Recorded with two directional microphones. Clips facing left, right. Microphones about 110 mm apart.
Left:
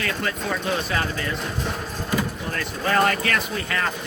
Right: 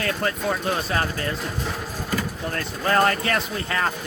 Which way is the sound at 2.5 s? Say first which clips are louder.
Right 1 dB; 35° right (ahead or behind).